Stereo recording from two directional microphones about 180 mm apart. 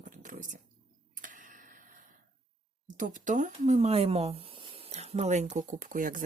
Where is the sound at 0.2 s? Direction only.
45° right (ahead or behind).